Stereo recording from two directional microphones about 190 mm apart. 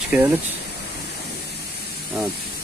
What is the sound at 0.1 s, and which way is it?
Speech, 10° right (ahead or behind).